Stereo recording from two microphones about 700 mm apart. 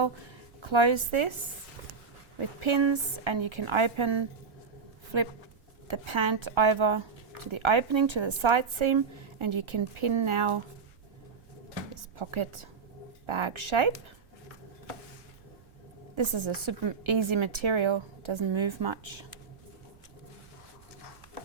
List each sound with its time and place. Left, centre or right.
0.6 s speech: right
2.6 s speech: right
11.9 s speech: right
16.1 s speech: right